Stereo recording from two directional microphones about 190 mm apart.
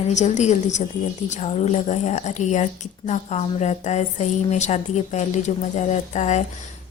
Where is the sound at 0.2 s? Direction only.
35° left (ahead or behind).